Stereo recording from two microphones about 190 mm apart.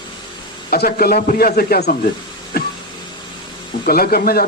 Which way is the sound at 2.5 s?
55° left (ahead or behind).